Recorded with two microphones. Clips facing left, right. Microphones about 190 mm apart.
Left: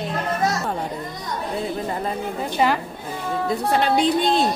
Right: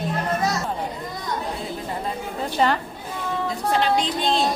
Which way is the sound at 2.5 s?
10° left (ahead or behind).